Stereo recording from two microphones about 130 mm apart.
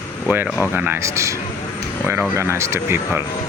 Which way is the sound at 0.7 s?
15° right (ahead or behind).